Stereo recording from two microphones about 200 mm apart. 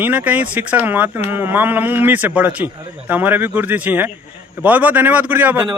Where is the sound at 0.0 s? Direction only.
10° right (ahead or behind).